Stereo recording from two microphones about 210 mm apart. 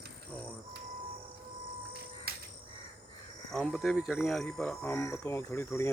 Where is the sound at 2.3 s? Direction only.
45° right (ahead or behind).